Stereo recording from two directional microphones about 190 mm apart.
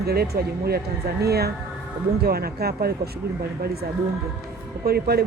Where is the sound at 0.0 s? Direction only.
55° right (ahead or behind).